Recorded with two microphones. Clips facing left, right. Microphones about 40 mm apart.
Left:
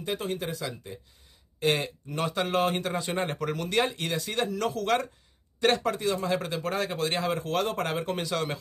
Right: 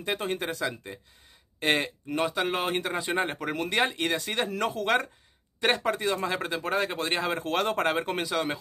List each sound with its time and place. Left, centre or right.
0.0 s speech: right
2.1 s a man's voice: centre
2.7 s a man's voice: right
3.5 s speech: right
8.2 s speech: centre